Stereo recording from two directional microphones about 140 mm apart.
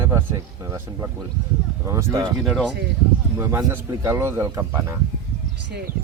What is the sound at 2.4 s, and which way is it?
Speech, centre (ahead or behind).